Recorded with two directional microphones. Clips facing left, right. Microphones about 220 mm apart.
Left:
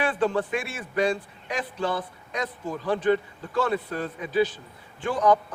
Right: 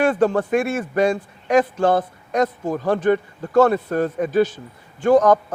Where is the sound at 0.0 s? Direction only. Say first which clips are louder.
Right 7 dB; 45° right (ahead or behind).